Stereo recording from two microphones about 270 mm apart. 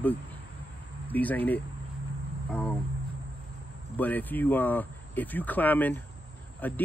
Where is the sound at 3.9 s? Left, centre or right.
Centre.